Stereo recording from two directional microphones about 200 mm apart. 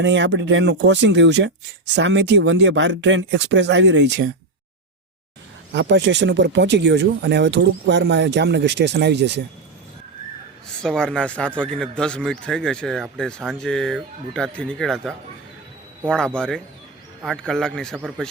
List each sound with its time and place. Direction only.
0.0 s speech: 60° right (ahead or behind)
5.7 s speech: 60° right (ahead or behind)
10.8 s speech: 5° left (ahead or behind)